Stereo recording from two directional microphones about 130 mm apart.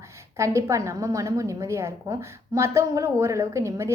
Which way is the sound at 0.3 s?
20° right (ahead or behind).